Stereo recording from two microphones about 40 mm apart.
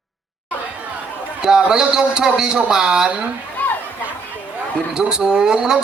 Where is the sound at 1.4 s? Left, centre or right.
Centre.